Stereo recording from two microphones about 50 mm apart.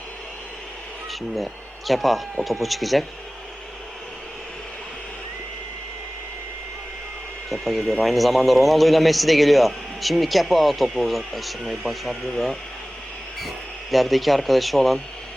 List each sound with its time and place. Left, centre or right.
1.9 s a man's voice: centre
7.5 s a man's voice: centre
13.9 s a man's voice: centre